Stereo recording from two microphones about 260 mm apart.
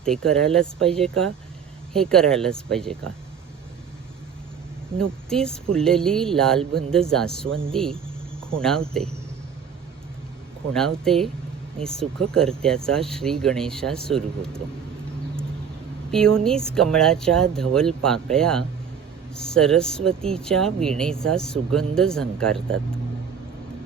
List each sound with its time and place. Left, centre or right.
0.0 s speech: centre
4.9 s speech: centre
7.4 s speech: right
7.7 s speech: centre
10.8 s speech: centre
12.3 s speech: centre
16.1 s speech: centre